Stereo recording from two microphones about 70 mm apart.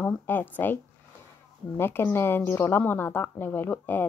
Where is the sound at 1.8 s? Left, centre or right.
Left.